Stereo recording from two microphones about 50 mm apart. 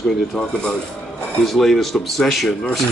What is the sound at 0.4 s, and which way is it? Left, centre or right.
Speech, centre.